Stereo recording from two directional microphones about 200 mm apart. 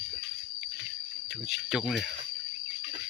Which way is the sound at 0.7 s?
60° right (ahead or behind).